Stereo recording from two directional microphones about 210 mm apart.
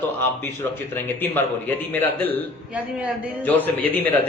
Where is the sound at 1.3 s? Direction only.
10° left (ahead or behind).